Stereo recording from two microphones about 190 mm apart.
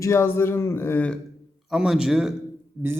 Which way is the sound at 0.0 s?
15° left (ahead or behind).